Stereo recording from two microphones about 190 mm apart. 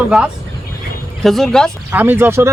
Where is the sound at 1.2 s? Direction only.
Centre (ahead or behind).